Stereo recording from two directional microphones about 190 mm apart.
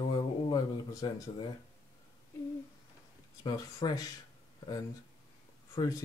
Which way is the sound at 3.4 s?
20° left (ahead or behind).